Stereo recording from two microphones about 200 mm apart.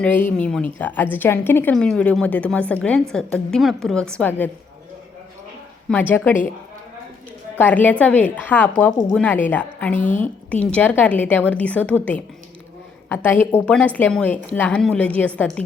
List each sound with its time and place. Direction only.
0.0 s a woman's voice: 10° left (ahead or behind)
5.9 s a woman's voice: 10° left (ahead or behind)
7.6 s a woman's voice: 10° left (ahead or behind)
9.9 s a woman's voice: 40° left (ahead or behind)
10.5 s a woman's voice: 5° left (ahead or behind)
13.1 s a woman's voice: 10° left (ahead or behind)